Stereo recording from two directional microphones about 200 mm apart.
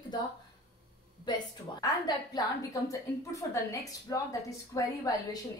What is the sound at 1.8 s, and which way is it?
A woman's voice, 20° left (ahead or behind).